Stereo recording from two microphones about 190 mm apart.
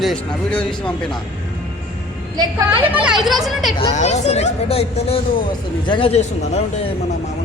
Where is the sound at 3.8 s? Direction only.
35° left (ahead or behind).